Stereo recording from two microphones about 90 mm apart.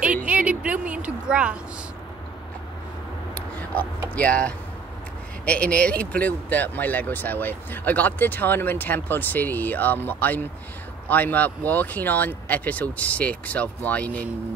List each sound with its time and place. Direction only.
0.0 s a sound: 15° right (ahead or behind)
1.3 s a woman's voice: 10° right (ahead or behind)
4.1 s speech: 15° left (ahead or behind)